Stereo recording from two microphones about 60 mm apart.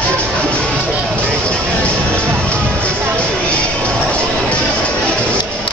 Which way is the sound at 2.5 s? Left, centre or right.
Centre.